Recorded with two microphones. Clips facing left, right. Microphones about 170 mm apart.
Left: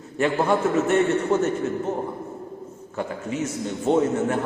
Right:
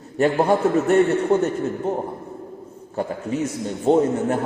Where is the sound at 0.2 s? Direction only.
30° right (ahead or behind).